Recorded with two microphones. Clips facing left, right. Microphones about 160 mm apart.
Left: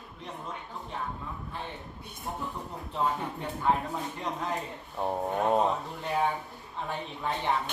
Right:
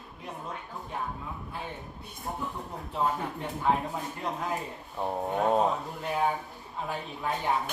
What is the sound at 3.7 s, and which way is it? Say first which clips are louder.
Speech: even; centre (ahead or behind).